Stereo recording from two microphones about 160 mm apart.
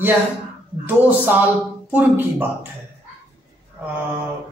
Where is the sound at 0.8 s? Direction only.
10° right (ahead or behind).